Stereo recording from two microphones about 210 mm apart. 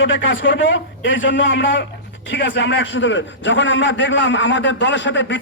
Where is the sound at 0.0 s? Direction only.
60° left (ahead or behind).